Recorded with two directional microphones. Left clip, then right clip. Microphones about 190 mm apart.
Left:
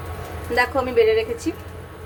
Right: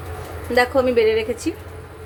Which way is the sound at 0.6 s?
25° right (ahead or behind).